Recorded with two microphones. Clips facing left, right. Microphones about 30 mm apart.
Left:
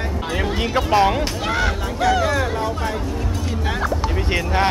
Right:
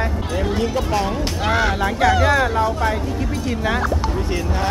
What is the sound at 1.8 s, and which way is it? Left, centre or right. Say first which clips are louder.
Speech: right 2 dB; centre.